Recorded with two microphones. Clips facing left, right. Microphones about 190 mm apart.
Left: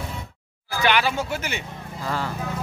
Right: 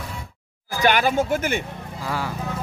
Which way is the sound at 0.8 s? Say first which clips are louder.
Right 3 dB; 50° right (ahead or behind).